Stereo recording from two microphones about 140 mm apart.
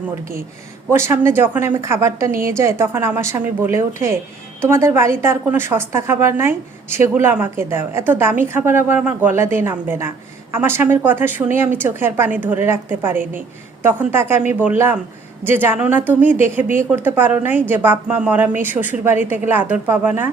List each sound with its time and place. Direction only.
0.9 s a woman's voice: 20° right (ahead or behind)